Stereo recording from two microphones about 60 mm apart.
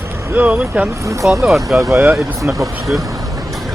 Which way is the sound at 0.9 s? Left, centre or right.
Right.